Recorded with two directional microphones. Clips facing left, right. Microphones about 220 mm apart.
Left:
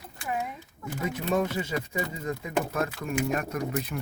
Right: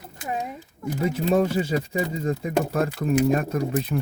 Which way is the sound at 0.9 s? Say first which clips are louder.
Right 6 dB; 30° right (ahead or behind).